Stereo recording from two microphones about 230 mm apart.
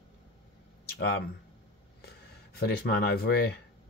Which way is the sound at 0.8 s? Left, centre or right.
Left.